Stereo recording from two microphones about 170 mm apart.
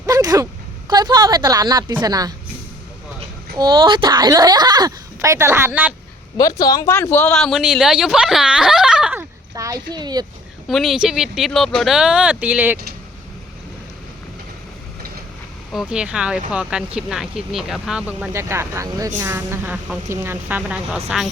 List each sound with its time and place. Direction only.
0.0 s a sound: 20° right (ahead or behind)
0.9 s speech: 25° right (ahead or behind)
3.6 s speech: 25° right (ahead or behind)
6.3 s speech: 20° left (ahead or behind)
7.5 s speech: 5° right (ahead or behind)
9.6 s speech: 20° right (ahead or behind)
10.7 s speech: centre (ahead or behind)
15.7 s speech: 5° right (ahead or behind)